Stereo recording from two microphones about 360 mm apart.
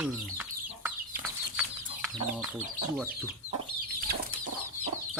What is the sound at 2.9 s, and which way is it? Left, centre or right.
Speech, centre.